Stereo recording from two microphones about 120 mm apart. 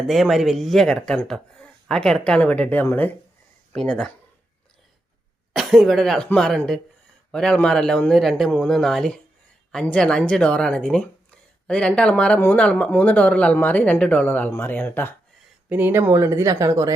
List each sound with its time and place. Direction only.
0.1 s speech: centre (ahead or behind)
5.5 s speech: centre (ahead or behind); by 15.1 s 15° left (ahead or behind)
15.7 s speech: 15° right (ahead or behind)